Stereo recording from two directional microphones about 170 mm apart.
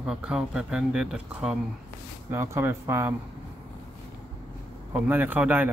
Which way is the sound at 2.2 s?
15° right (ahead or behind).